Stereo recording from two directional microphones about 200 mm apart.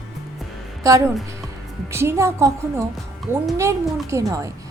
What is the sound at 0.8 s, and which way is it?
A woman's voice, 15° right (ahead or behind).